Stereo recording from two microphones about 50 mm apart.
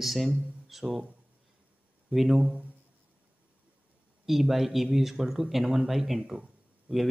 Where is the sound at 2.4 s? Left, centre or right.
Centre.